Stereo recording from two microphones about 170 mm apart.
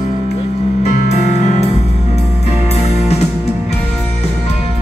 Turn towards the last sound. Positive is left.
turn(degrees=40)  # may be behind; listen again after turning